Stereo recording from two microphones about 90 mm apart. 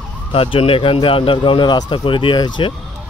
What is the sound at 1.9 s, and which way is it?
Speech, 70° left (ahead or behind).